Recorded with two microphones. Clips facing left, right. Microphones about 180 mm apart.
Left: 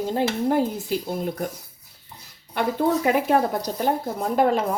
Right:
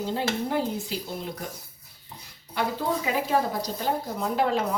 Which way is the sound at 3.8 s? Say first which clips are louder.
Left 4 dB; 50° left (ahead or behind).